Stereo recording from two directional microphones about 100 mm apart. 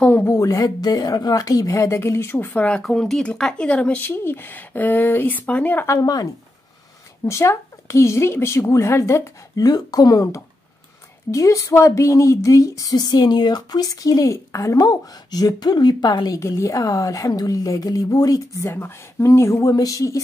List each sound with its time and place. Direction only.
0.0 s speech: 20° left (ahead or behind)
0.4 s speech: 35° left (ahead or behind); by 2.8 s 15° left (ahead or behind)
2.8 s speech: 5° left (ahead or behind)
5.9 s speech: 40° left (ahead or behind)
7.2 s speech: 30° left (ahead or behind)
18.7 s speech: 20° left (ahead or behind)